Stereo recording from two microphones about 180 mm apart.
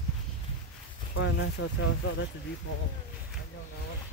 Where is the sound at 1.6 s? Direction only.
90° left.